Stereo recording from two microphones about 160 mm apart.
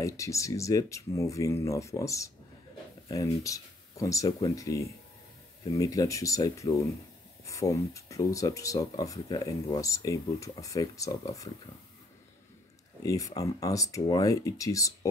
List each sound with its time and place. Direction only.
0.0 s speech: 20° left (ahead or behind)
13.0 s speech: 20° left (ahead or behind)